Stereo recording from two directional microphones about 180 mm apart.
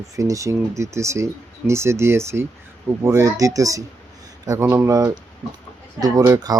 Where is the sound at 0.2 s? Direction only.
15° right (ahead or behind).